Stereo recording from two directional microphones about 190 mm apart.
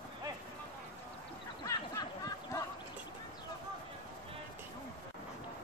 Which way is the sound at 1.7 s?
20° left (ahead or behind).